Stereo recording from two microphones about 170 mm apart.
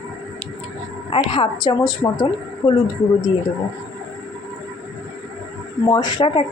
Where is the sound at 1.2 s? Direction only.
30° left (ahead or behind).